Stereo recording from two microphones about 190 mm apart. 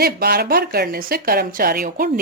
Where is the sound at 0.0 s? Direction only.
55° right (ahead or behind).